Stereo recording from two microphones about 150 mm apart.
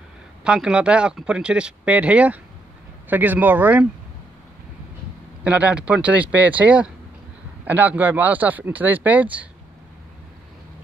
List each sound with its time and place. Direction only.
0.4 s speech: 5° right (ahead or behind)
5.4 s speech: 10° right (ahead or behind)